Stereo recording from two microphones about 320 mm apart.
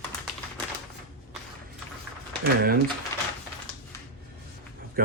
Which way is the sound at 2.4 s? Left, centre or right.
Right.